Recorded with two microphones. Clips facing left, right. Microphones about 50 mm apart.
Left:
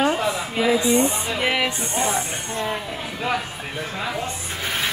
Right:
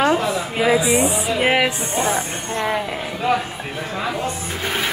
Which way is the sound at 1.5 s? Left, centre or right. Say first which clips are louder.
Right 4 dB; right.